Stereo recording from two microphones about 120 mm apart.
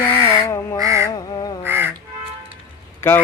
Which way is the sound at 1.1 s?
35° left (ahead or behind).